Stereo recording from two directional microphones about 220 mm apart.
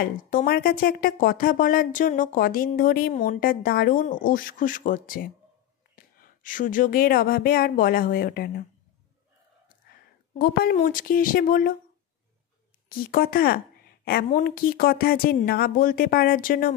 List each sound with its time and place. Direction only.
0.0 s speech: 40° left (ahead or behind)
10.4 s speech: 40° left (ahead or behind)
12.9 s speech: 40° left (ahead or behind)